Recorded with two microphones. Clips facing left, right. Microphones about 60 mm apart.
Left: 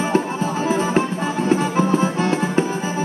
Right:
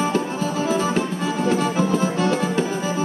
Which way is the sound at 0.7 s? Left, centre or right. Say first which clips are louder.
Left 4 dB; left.